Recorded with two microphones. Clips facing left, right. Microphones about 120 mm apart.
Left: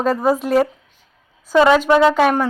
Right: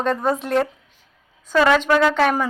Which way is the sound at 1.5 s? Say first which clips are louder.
Left 4 dB; 15° left (ahead or behind).